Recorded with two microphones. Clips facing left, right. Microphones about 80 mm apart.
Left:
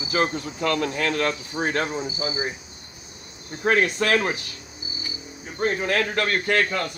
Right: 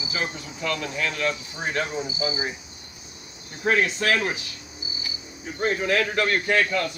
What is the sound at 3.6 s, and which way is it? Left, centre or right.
Speech, left.